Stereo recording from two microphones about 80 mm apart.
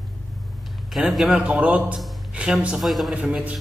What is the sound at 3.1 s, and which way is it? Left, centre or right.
Speech, centre.